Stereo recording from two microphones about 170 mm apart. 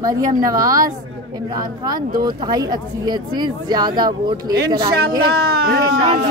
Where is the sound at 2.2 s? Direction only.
25° right (ahead or behind).